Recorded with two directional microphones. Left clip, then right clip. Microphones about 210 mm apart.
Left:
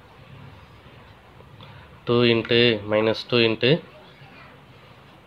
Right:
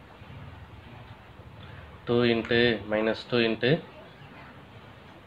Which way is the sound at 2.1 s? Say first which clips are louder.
Left 5 dB; 40° left (ahead or behind).